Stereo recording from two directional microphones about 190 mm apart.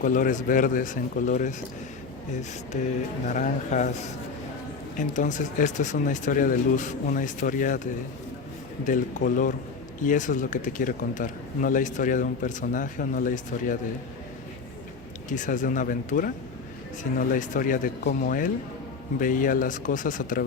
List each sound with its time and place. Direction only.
0.0 s speech: 45° left (ahead or behind)
3.2 s speech: 40° left (ahead or behind)
4.9 s speech: 40° left (ahead or behind)
8.8 s speech: 45° left (ahead or behind)
15.3 s speech: 40° left (ahead or behind)